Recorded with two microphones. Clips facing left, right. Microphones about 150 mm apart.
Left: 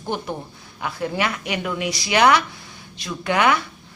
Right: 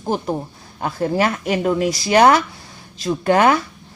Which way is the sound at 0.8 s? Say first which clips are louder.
Right 5 dB; 40° right (ahead or behind).